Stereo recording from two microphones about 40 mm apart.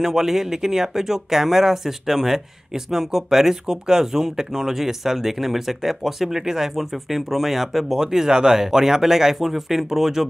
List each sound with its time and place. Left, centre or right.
0.0 s speech: centre